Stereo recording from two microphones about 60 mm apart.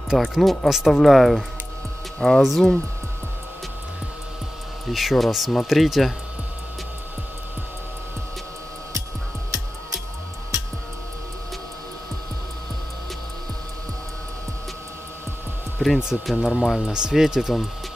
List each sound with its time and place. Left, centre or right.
0.3 s speech: centre
4.9 s speech: centre
15.8 s speech: centre